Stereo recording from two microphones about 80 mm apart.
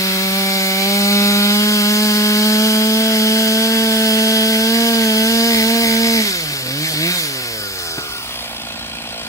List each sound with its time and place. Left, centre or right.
0.0 s sawing: left